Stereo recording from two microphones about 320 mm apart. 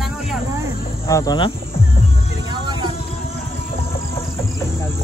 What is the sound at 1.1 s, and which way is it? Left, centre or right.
Speech, centre.